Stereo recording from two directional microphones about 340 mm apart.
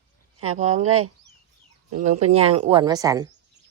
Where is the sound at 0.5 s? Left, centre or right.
Centre.